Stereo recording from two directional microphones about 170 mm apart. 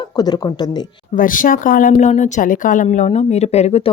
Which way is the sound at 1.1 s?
50° left (ahead or behind).